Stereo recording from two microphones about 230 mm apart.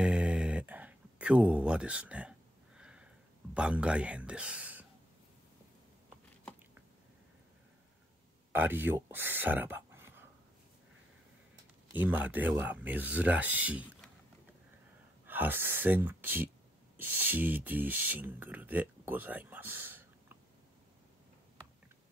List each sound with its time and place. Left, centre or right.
0.0 s a sound: centre
3.5 s speech: centre
8.5 s speech: centre
11.9 s speech: centre
15.2 s speech: centre